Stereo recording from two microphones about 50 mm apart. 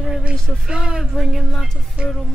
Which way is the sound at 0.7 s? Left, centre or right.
Centre.